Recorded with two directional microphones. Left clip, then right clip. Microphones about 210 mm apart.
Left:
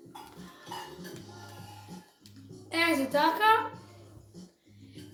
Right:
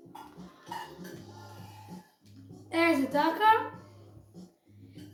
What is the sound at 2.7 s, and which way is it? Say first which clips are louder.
Speech: right 1 dB; 20° left (ahead or behind).